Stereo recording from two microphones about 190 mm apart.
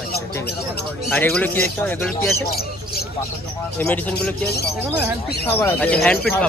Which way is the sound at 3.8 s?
10° left (ahead or behind).